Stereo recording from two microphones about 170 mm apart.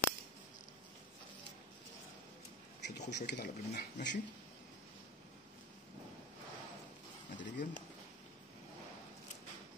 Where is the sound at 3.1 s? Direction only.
70° left (ahead or behind).